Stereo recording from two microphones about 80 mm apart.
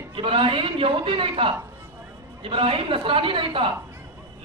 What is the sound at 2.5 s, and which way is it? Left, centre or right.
A man's voice, right.